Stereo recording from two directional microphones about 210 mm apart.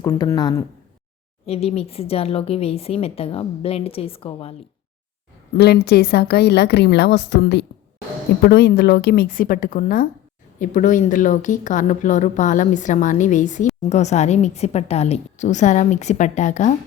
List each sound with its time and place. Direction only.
0.0 s speech: 15° left (ahead or behind)
1.5 s speech: 30° left (ahead or behind)
5.5 s a woman's voice: 50° left (ahead or behind); by 16.7 s 35° left (ahead or behind)